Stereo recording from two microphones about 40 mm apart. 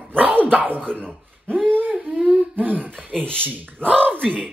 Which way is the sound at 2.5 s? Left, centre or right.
Right.